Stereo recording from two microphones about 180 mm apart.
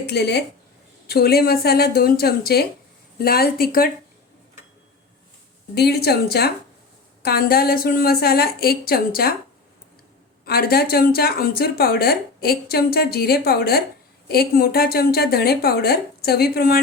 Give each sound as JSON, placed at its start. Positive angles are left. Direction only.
{"t": 0.0, "sound": "speech", "side_deg": 65}
{"t": 5.7, "sound": "speech", "side_deg": 65}
{"t": 10.4, "sound": "speech", "side_deg": 60}